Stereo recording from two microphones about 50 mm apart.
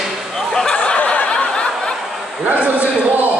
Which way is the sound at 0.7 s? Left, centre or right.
Left.